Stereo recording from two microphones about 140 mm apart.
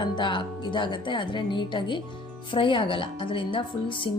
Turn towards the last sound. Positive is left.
turn(degrees=40)  # may be behind; listen again after turning